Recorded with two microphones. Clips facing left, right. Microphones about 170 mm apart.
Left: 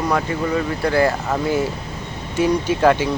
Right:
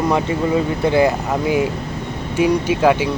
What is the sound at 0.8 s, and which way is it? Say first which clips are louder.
Speech: right 1 dB; 20° right (ahead or behind).